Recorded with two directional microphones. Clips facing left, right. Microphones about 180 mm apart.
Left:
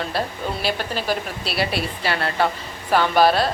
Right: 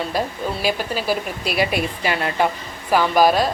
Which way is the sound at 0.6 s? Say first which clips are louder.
Right 3 dB; 5° right (ahead or behind).